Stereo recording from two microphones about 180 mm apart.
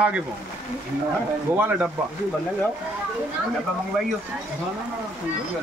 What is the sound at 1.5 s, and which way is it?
Speech, 10° right (ahead or behind).